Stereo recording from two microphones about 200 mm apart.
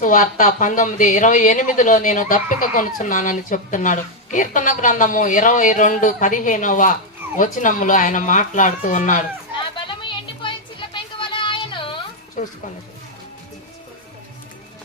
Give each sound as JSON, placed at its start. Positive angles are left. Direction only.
{"t": 0.0, "sound": "speech", "side_deg": 40}
{"t": 9.8, "sound": "music", "side_deg": 25}
{"t": 12.4, "sound": "a sound", "side_deg": 40}